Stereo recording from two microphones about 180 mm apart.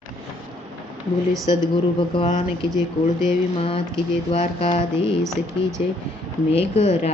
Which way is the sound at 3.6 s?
30° left (ahead or behind).